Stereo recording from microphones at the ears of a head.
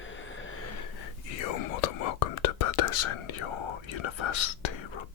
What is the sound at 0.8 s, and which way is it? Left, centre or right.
Whispering, left.